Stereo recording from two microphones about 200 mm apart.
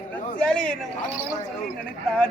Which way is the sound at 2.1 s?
5° left (ahead or behind).